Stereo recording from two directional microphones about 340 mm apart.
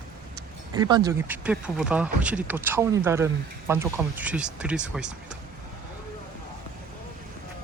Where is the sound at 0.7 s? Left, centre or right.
Centre.